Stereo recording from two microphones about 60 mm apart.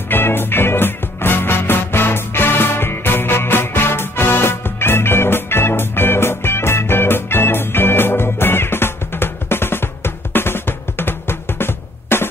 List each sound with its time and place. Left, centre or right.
0.1 s music: left